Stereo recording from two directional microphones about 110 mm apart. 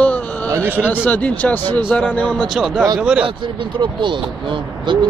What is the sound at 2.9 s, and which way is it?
Speech, 10° right (ahead or behind).